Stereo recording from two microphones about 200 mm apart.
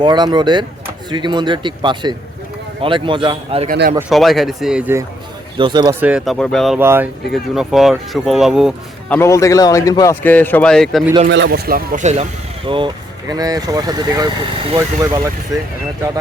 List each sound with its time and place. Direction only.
0.0 s speech: 20° right (ahead or behind)
3.7 s a man's voice: 45° right (ahead or behind)
4.1 s speech: centre (ahead or behind)
5.5 s speech: 20° right (ahead or behind)
6.0 s speech: 5° right (ahead or behind)
6.7 s speech: 10° right (ahead or behind)
9.1 s speech: 15° left (ahead or behind)
11.3 s speech: 60° right (ahead or behind); by 15.3 s 15° right (ahead or behind)